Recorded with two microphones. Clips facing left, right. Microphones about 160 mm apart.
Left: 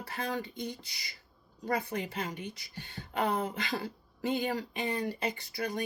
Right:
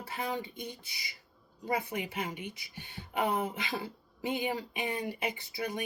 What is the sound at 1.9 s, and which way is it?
Speech, 10° right (ahead or behind).